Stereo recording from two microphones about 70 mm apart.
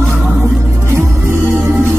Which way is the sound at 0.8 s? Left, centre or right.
Right.